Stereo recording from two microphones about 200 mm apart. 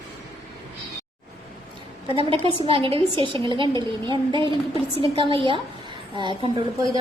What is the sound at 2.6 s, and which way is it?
A woman's voice, 25° right (ahead or behind).